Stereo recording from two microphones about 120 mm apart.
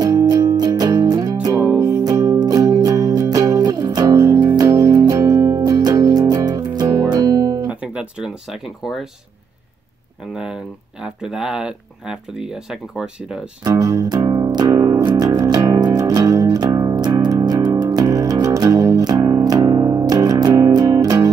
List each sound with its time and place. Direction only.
0.0 s music: 30° right (ahead or behind)
7.6 s guitar: 10° right (ahead or behind)
10.3 s speech: 5° right (ahead or behind)
13.7 s music: 30° right (ahead or behind)